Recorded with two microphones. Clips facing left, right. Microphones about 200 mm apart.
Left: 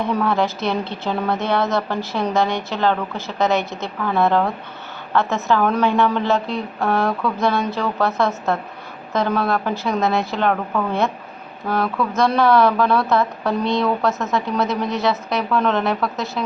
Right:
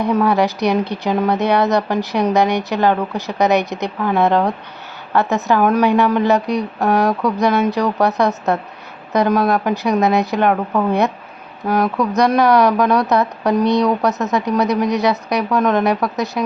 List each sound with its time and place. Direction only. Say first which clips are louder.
0.0 s a woman's voice: right 4 dB; 15° right (ahead or behind)